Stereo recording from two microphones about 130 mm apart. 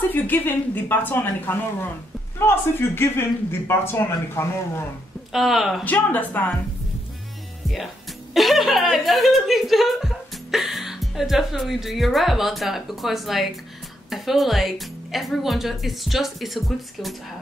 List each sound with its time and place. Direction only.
0.1 s a man's voice: 15° left (ahead or behind)
5.3 s speech: centre (ahead or behind)
5.9 s speech: 10° left (ahead or behind)
8.4 s speech: centre (ahead or behind)